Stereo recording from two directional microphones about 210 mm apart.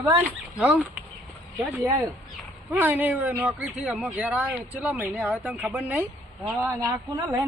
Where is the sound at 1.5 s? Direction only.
15° right (ahead or behind).